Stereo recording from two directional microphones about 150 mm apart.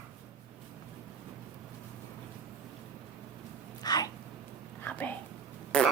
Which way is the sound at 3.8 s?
25° left (ahead or behind).